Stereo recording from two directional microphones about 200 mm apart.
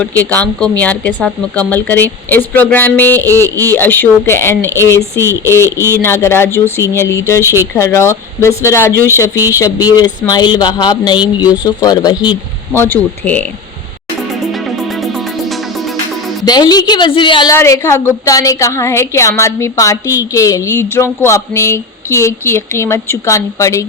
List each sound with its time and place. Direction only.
0.0 s a woman's voice: 10° left (ahead or behind)
3.5 s speech: 15° right (ahead or behind)
3.8 s a woman's voice: 10° left (ahead or behind)
5.7 s speech: 15° right (ahead or behind)
6.0 s a woman's voice: 15° left (ahead or behind)
14.4 s music: centre (ahead or behind)
16.5 s a woman's voice: 20° left (ahead or behind)